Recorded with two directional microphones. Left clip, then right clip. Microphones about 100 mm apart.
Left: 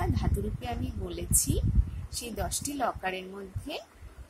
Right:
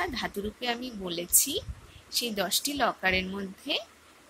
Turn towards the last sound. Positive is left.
turn(degrees=5)  # may be behind; listen again after turning